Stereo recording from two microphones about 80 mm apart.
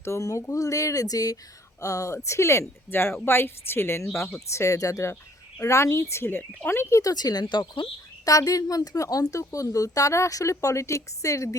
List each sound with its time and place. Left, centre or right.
0.0 s a woman's voice: left
7.0 s speech: left
8.2 s a woman's voice: left